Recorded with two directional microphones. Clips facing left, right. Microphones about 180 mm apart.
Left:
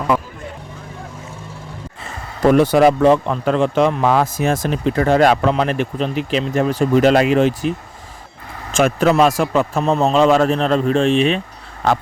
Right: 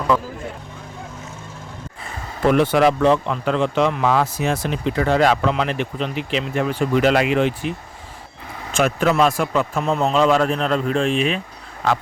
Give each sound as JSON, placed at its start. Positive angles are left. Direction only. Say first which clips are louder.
{"t": 2.4, "sound": "a man's voice", "louder": "left 4 dB", "side_deg": 40}
{"t": 8.7, "sound": "a man's voice", "louder": "left 4 dB", "side_deg": 45}
{"t": 9.8, "sound": "speech", "louder": "left 5 dB", "side_deg": 25}
{"t": 10.1, "sound": "a man's voice", "louder": "left 3 dB", "side_deg": 45}
{"t": 10.5, "sound": "speech", "louder": "left 4 dB", "side_deg": 30}